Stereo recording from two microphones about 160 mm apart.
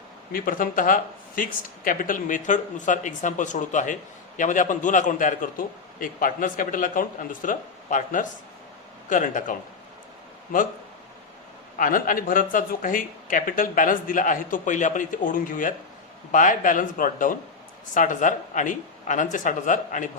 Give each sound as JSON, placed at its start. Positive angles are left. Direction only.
{"t": 0.3, "sound": "a man's voice", "side_deg": 60}
{"t": 11.8, "sound": "a man's voice", "side_deg": 60}